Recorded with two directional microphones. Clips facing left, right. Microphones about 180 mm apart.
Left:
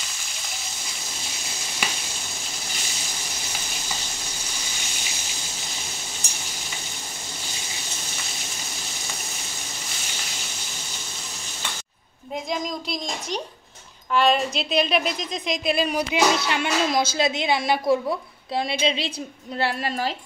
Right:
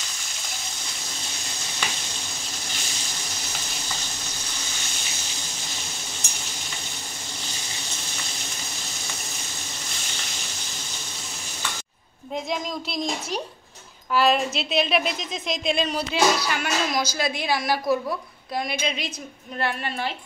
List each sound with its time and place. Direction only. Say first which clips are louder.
12.4 s a woman's voice: left 3 dB; centre (ahead or behind); by 20.1 s 35° left (ahead or behind)